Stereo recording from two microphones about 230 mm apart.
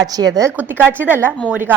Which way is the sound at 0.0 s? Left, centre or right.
Centre.